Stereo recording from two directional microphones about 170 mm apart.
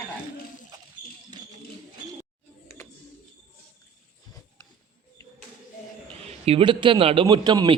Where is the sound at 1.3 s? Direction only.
25° right (ahead or behind).